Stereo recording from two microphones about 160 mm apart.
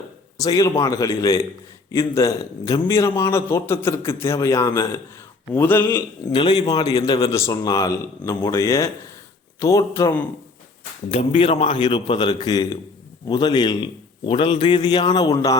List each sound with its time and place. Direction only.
0.3 s a man's voice: 20° left (ahead or behind)
6.3 s a man's voice: 30° left (ahead or behind)
11.1 s a man's voice: 40° left (ahead or behind); by 15.5 s 25° left (ahead or behind)